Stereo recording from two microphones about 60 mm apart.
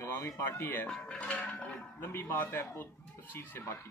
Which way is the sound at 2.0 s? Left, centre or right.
Left.